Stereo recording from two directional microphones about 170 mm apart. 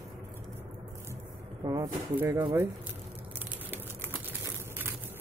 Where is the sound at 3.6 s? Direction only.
15° right (ahead or behind).